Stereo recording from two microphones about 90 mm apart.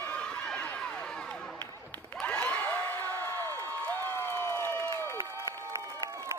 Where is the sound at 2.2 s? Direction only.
15° left (ahead or behind).